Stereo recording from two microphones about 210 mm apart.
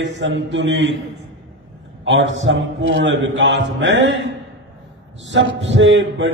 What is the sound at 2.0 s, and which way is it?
A man's voice, 60° right (ahead or behind).